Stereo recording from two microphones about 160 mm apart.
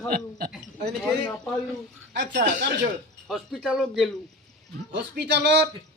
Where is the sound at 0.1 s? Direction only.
65° right (ahead or behind).